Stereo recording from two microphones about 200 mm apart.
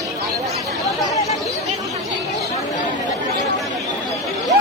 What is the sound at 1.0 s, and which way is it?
Chatter, 15° left (ahead or behind).